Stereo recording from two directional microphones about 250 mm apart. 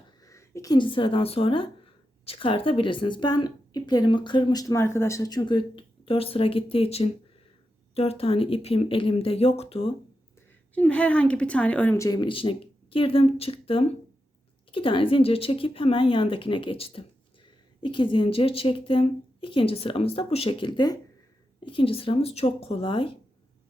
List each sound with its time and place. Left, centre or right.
0.3 s a woman's voice: centre
10.8 s a woman's voice: centre; by 23.1 s left